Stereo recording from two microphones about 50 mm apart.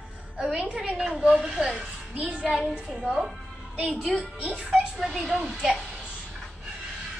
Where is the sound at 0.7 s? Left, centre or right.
Centre.